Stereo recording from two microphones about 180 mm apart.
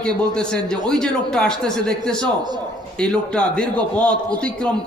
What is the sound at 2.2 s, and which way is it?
Speech, 25° right (ahead or behind).